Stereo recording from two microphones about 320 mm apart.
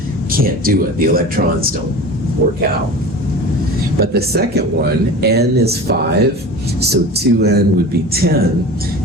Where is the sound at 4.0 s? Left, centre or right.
Right.